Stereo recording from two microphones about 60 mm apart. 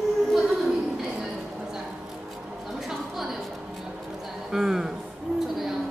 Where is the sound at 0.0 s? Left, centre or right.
Centre.